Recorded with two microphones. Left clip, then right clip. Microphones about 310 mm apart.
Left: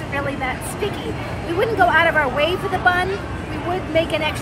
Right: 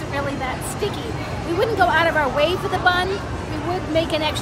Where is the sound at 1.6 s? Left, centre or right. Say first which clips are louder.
Left 2 dB; centre.